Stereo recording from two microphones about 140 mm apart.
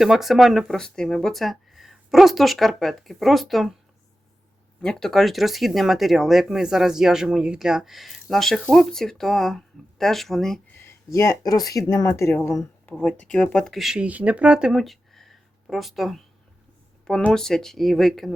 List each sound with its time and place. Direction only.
0.0 s speech: centre (ahead or behind)
4.8 s speech: 5° left (ahead or behind)
10.7 s speech: 20° left (ahead or behind); by 18.3 s centre (ahead or behind)